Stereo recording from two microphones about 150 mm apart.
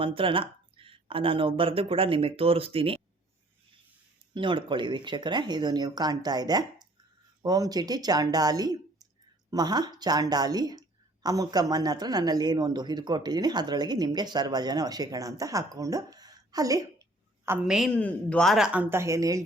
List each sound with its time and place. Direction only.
0.0 s speech: 35° right (ahead or behind)
4.4 s a woman's voice: 30° right (ahead or behind); by 17.7 s 15° right (ahead or behind)
17.7 s speech: centre (ahead or behind); by 19.5 s 20° right (ahead or behind)